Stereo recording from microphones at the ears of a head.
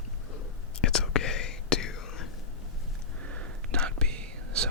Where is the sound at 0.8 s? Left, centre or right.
Left.